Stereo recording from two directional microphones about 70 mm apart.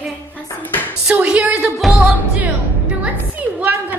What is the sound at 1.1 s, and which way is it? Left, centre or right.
Speech, centre.